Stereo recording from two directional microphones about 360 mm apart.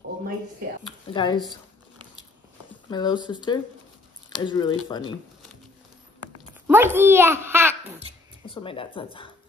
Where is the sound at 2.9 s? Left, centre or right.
Centre.